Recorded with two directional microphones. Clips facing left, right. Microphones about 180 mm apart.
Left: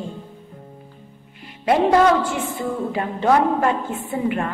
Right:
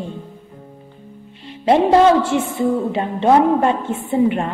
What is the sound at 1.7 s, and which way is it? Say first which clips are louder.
A woman's voice: right 3 dB; 25° right (ahead or behind).